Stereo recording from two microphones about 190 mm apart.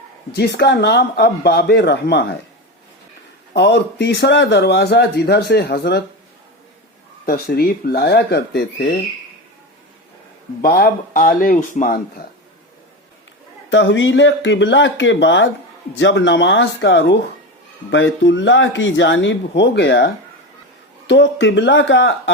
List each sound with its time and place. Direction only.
0.3 s speech: 60° left (ahead or behind)
3.5 s speech: 65° left (ahead or behind)
7.3 s speech: 50° left (ahead or behind)
10.6 s speech: 50° left (ahead or behind)
13.7 s speech: 75° left (ahead or behind)
17.9 s speech: 75° left (ahead or behind)
21.1 s speech: 70° left (ahead or behind)